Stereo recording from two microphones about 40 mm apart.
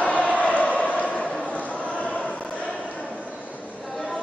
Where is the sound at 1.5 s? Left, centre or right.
Left.